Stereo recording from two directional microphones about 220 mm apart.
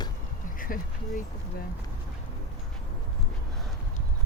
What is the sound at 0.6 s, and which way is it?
Speech, 40° left (ahead or behind).